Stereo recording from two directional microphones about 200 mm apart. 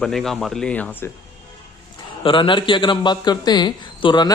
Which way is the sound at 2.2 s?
25° left (ahead or behind).